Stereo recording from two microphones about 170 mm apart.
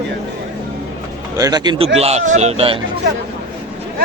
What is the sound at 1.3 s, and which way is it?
Speech, 25° right (ahead or behind).